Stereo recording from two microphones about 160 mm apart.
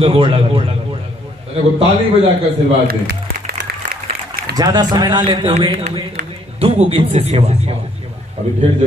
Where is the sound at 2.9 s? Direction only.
90° right.